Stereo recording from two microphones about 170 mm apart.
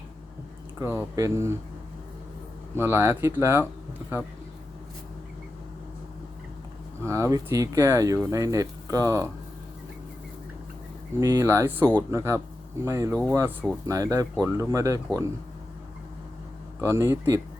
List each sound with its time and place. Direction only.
0.8 s speech: 15° right (ahead or behind)
2.7 s speech: 15° right (ahead or behind)
7.0 s speech: 15° right (ahead or behind)
11.2 s speech: 20° right (ahead or behind)
16.8 s speech: 15° right (ahead or behind)